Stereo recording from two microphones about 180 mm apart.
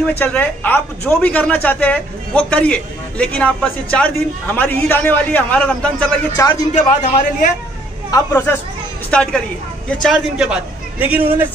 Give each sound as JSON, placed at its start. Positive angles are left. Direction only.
{"t": 0.0, "sound": "speech", "side_deg": 10}
{"t": 6.4, "sound": "speech", "side_deg": 15}
{"t": 6.7, "sound": "a man's voice", "side_deg": 40}
{"t": 8.1, "sound": "a man's voice", "side_deg": 15}